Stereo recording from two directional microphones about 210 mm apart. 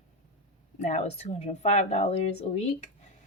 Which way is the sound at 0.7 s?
35° left (ahead or behind).